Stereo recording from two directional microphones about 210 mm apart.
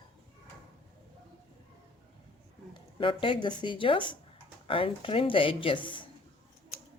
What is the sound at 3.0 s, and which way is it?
Speech, 25° left (ahead or behind).